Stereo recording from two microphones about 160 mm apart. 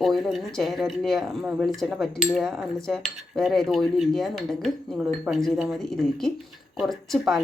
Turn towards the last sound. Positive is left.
turn(degrees=0)  # may be behind; listen again after turning